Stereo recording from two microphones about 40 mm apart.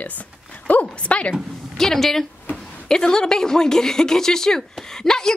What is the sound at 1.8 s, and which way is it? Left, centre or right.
A woman's voice, centre.